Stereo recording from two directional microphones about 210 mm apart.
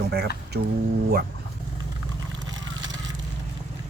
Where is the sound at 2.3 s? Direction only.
20° right (ahead or behind).